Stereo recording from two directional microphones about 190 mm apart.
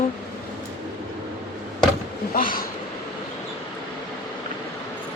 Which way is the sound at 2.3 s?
45° left (ahead or behind).